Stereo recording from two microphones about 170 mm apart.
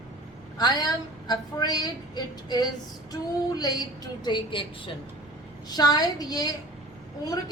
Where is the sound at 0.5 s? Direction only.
25° left (ahead or behind).